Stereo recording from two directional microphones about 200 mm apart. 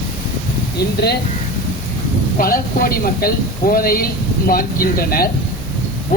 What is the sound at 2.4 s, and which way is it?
Speech, 45° left (ahead or behind).